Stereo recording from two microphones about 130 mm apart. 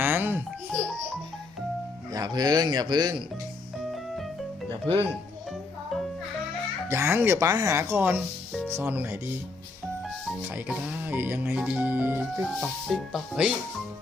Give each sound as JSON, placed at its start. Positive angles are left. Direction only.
{"t": 0.0, "sound": "music", "side_deg": -15}
{"t": 2.1, "sound": "speech", "side_deg": -30}
{"t": 3.8, "sound": "music", "side_deg": 0}
{"t": 6.8, "sound": "speech", "side_deg": -20}
{"t": 8.7, "sound": "music", "side_deg": -15}
{"t": 10.4, "sound": "music", "side_deg": -15}
{"t": 12.5, "sound": "speech", "side_deg": 0}